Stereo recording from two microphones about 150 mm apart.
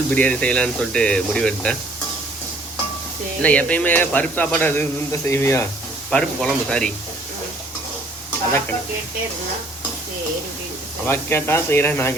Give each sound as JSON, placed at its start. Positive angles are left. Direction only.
{"t": 0.1, "sound": "speech", "side_deg": 10}
{"t": 3.4, "sound": "speech", "side_deg": 10}
{"t": 6.1, "sound": "speech", "side_deg": 5}
{"t": 11.0, "sound": "speech", "side_deg": 15}